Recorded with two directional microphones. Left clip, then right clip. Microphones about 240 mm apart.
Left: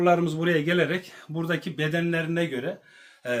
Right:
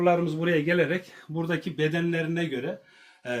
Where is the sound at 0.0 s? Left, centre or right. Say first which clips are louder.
Left 2 dB; left.